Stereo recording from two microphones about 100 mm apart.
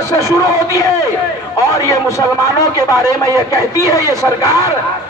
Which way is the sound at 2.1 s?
35° left (ahead or behind).